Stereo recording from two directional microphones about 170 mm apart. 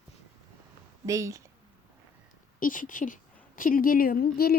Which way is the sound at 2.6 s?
55° left (ahead or behind).